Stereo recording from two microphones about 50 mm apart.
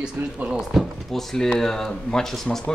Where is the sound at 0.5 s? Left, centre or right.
Centre.